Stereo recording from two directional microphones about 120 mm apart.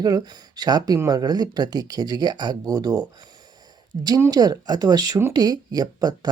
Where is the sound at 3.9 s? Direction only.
55° right (ahead or behind).